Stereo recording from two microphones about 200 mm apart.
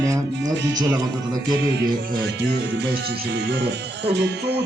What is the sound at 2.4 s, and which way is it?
Music, 60° right (ahead or behind).